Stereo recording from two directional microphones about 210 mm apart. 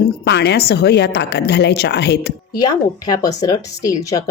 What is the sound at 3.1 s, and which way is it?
Speech, 20° left (ahead or behind).